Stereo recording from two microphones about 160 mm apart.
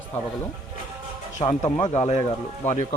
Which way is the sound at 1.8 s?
45° left (ahead or behind).